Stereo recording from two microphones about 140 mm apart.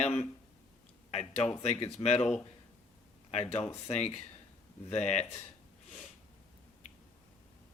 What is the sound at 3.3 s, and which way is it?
Speech, 50° left (ahead or behind).